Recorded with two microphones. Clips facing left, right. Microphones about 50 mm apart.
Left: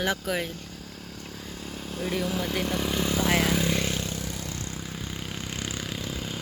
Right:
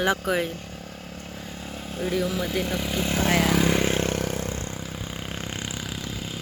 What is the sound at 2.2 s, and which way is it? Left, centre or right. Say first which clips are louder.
Speech: right 2 dB; centre.